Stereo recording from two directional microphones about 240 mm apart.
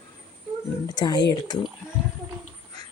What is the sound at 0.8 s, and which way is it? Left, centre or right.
Speech, centre.